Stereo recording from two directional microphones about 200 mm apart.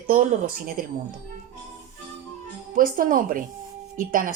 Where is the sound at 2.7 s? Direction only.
45° right (ahead or behind).